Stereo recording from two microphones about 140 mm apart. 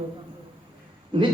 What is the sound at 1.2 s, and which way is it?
Speech, 40° right (ahead or behind).